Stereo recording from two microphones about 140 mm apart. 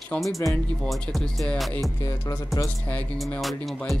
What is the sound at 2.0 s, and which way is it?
Music, 30° left (ahead or behind).